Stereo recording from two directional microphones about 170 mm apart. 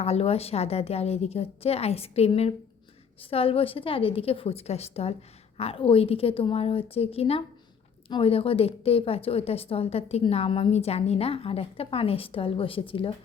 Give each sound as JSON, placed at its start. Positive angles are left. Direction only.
{"t": 0.0, "sound": "a woman's voice", "side_deg": 35}